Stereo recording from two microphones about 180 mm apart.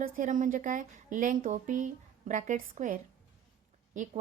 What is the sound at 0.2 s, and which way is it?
A woman's voice, 45° right (ahead or behind).